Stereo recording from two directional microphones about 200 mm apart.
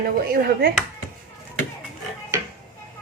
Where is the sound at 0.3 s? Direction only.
50° right (ahead or behind).